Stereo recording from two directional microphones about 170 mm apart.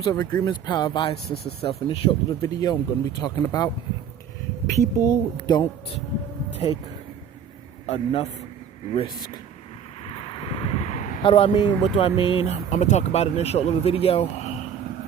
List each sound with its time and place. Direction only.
0.0 s a woman's voice: 20° left (ahead or behind)
2.4 s a woman's voice: 20° left (ahead or behind)
4.7 s a woman's voice: 20° left (ahead or behind)
6.6 s speech: 35° left (ahead or behind)
7.9 s speech: 35° left (ahead or behind)
10.1 s vehicle: 30° left (ahead or behind)
11.2 s speech: 30° left (ahead or behind)